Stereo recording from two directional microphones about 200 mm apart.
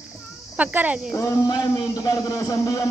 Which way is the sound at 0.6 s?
5° right (ahead or behind).